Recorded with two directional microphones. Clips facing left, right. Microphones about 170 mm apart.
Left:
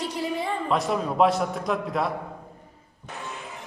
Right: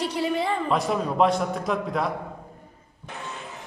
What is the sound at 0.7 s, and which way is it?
A man's voice, centre (ahead or behind).